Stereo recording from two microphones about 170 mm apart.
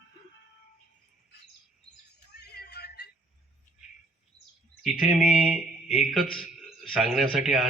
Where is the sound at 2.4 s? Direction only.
70° left (ahead or behind).